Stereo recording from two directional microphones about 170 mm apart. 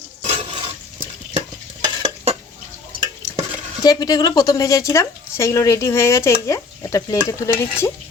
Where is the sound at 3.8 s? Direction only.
20° left (ahead or behind).